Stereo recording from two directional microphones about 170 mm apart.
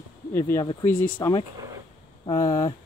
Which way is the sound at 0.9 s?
50° left (ahead or behind).